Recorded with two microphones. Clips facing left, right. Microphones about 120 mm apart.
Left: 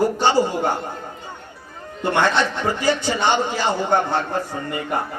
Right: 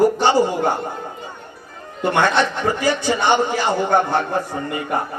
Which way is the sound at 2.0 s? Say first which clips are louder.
Right 2 dB; 15° right (ahead or behind).